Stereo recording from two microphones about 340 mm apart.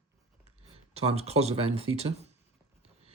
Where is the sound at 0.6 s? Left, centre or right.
Centre.